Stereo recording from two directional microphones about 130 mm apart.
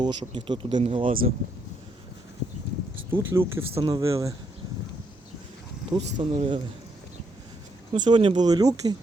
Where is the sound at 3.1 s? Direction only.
15° right (ahead or behind).